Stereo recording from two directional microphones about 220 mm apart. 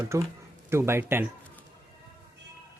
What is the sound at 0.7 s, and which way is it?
Speech, 10° right (ahead or behind).